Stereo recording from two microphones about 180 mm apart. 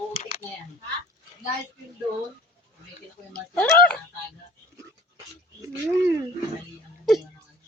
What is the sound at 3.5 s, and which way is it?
Speech, 10° left (ahead or behind).